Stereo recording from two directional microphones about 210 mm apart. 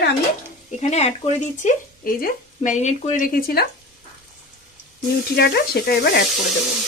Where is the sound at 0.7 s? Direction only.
30° left (ahead or behind).